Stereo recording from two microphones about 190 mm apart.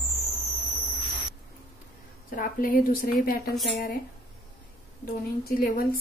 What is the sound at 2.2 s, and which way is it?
A woman's voice, 45° left (ahead or behind).